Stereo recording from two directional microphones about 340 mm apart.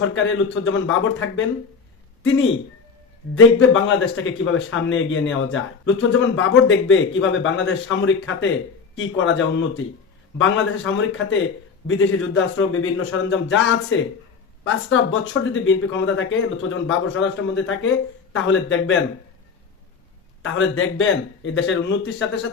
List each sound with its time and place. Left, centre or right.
0.0 s a man's voice: left
3.3 s a man's voice: left
20.4 s a man's voice: left